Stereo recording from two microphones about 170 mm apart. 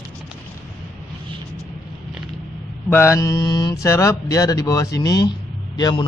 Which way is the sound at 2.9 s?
15° left (ahead or behind).